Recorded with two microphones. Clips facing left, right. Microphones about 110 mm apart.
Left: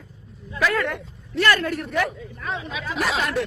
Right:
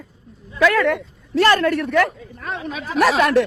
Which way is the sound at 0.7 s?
90° right.